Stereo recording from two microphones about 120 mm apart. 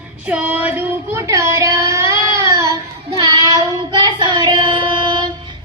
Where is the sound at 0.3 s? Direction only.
10° right (ahead or behind).